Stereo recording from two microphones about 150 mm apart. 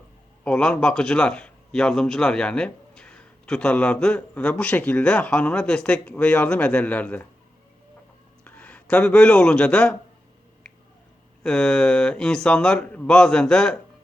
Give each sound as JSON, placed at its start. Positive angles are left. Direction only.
{"t": 0.4, "sound": "speech", "side_deg": 5}
{"t": 8.4, "sound": "speech", "side_deg": 10}
{"t": 11.4, "sound": "speech", "side_deg": 5}